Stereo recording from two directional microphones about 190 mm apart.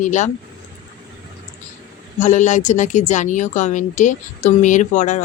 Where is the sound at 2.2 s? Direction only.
40° left (ahead or behind).